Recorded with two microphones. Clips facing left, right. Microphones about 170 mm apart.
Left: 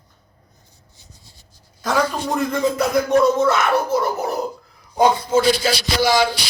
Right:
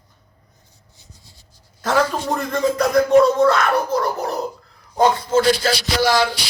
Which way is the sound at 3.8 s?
5° left (ahead or behind).